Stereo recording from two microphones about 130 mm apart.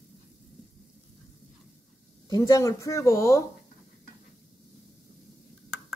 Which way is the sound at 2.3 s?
25° left (ahead or behind).